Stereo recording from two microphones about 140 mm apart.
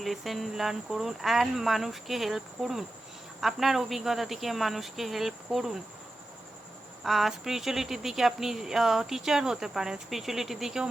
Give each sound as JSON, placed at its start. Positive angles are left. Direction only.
{"t": 0.0, "sound": "speech", "side_deg": 0}
{"t": 7.0, "sound": "speech", "side_deg": 0}